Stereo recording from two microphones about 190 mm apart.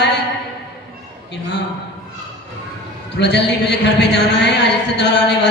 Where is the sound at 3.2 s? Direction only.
60° left (ahead or behind).